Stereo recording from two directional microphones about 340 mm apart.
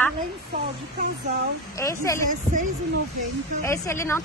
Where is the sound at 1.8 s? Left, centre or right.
Centre.